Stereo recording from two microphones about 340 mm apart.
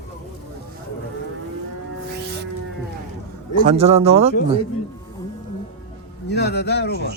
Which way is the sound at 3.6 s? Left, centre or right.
Centre.